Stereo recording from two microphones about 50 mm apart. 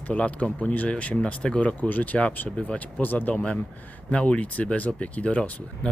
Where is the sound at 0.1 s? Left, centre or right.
Left.